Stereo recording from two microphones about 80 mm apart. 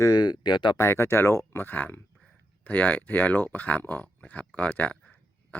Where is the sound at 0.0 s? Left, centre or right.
Left.